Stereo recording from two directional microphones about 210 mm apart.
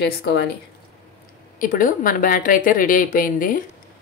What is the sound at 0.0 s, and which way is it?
Speech, 50° left (ahead or behind).